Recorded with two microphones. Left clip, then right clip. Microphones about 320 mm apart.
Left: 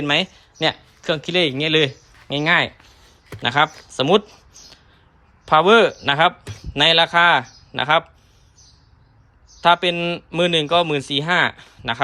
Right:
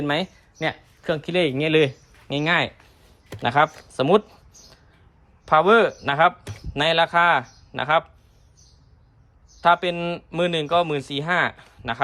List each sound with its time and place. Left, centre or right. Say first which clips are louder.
0.0 s speech: left 5 dB; centre
9.6 s speech: left 3 dB; centre